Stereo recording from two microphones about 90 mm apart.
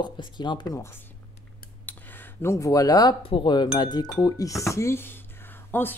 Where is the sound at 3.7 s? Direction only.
55° left (ahead or behind).